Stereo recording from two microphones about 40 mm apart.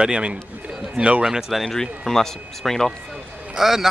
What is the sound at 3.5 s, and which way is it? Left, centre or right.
Speech, centre.